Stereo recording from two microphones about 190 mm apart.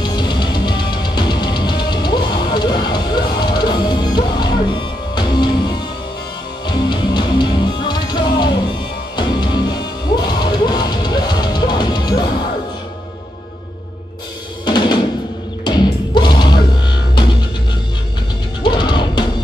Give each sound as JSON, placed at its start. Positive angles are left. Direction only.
{"t": 0.0, "sound": "music", "side_deg": 25}
{"t": 14.6, "sound": "drum", "side_deg": 20}
{"t": 15.6, "sound": "music", "side_deg": 25}
{"t": 18.6, "sound": "music", "side_deg": 25}